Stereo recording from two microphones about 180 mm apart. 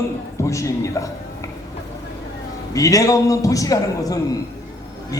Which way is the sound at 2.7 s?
20° left (ahead or behind).